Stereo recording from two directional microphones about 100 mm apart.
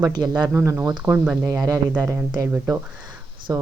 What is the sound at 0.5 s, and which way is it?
Speech, 25° right (ahead or behind).